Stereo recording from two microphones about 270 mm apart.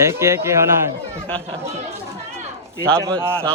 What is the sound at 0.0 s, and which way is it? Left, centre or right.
Speech, centre.